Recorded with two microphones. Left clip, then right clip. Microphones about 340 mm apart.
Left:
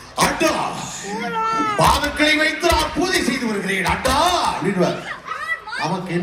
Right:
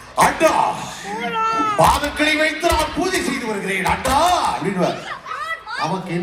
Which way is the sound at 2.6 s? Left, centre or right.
Centre.